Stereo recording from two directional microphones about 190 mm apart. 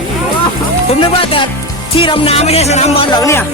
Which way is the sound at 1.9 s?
30° left (ahead or behind).